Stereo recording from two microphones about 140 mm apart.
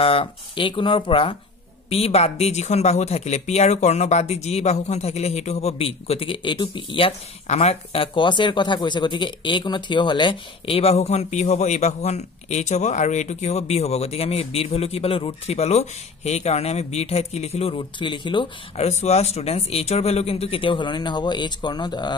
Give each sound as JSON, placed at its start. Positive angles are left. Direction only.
{"t": 0.0, "sound": "speech", "side_deg": 40}
{"t": 18.9, "sound": "speech", "side_deg": 50}